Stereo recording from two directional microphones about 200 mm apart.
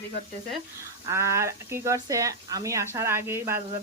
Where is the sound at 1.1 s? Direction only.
15° right (ahead or behind).